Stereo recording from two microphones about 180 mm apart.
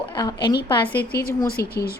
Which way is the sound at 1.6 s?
60° left (ahead or behind).